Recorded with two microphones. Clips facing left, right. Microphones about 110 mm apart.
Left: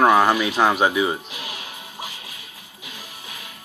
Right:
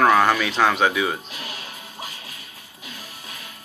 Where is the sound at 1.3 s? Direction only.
40° right (ahead or behind).